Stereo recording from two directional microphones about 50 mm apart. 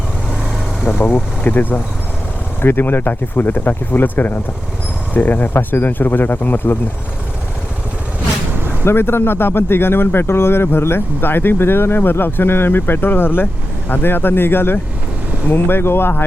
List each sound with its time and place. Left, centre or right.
0.9 s vehicle: left
1.5 s speech: left
8.8 s speech: left